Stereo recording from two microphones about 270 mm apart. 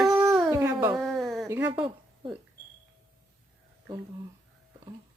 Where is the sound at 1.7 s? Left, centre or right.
Centre.